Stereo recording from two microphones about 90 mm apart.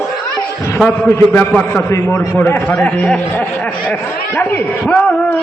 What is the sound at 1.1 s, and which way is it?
A man's voice, 20° left (ahead or behind).